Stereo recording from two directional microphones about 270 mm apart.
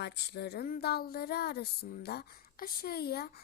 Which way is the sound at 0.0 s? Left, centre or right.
Left.